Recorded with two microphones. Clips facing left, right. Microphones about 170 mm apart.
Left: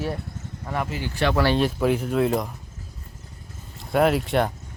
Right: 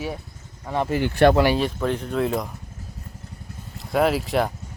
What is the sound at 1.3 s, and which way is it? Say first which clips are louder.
Speech: right 2 dB; 15° right (ahead or behind).